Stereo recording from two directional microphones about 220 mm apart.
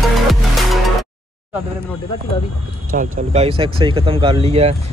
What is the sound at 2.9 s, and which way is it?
Speech, 40° right (ahead or behind).